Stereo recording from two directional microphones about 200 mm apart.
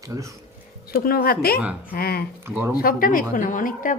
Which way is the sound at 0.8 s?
50° left (ahead or behind).